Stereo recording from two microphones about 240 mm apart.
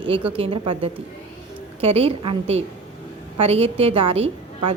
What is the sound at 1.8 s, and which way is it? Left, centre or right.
Speech, right.